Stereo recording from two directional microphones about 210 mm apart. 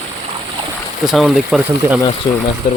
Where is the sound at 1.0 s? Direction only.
Centre (ahead or behind).